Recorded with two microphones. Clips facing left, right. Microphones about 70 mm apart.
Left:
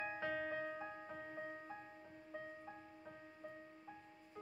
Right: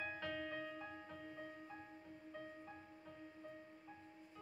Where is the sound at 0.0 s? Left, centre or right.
Left.